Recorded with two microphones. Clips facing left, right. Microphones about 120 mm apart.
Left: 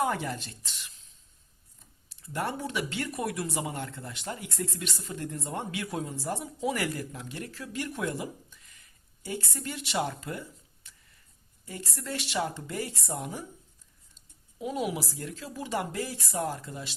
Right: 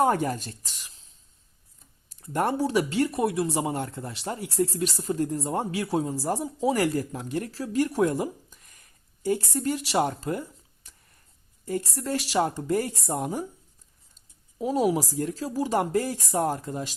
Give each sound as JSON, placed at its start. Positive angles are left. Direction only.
{"t": 0.0, "sound": "speech", "side_deg": -45}
{"t": 2.0, "sound": "speech", "side_deg": -45}
{"t": 10.8, "sound": "a sound", "side_deg": -40}
{"t": 11.6, "sound": "speech", "side_deg": -40}
{"t": 14.6, "sound": "speech", "side_deg": -40}